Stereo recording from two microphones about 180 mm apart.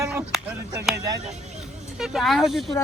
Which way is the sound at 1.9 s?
Centre (ahead or behind).